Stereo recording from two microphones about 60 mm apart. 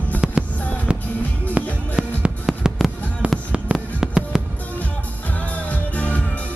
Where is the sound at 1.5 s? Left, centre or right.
Centre.